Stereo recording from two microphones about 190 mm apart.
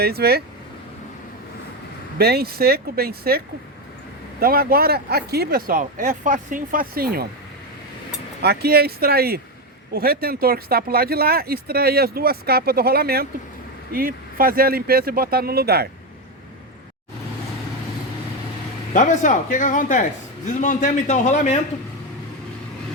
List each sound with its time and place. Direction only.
0.0 s speech: 55° right (ahead or behind)
2.1 s speech: 55° right (ahead or behind)
8.4 s speech: 55° right (ahead or behind)
18.9 s a man's voice: 40° left (ahead or behind)